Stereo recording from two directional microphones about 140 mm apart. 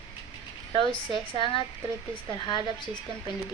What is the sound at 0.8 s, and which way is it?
A woman's voice, 35° left (ahead or behind).